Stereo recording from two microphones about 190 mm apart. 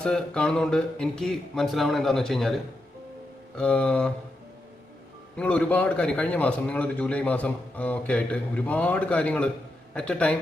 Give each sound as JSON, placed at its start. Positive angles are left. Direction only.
{"t": 0.0, "sound": "speech", "side_deg": 5}
{"t": 3.6, "sound": "speech", "side_deg": 5}
{"t": 5.4, "sound": "a man's voice", "side_deg": 5}